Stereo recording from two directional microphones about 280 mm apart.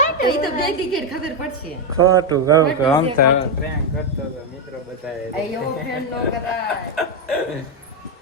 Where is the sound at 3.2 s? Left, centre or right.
Left.